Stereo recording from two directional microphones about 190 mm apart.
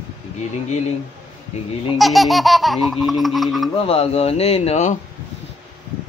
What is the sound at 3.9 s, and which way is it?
Speech, 30° left (ahead or behind).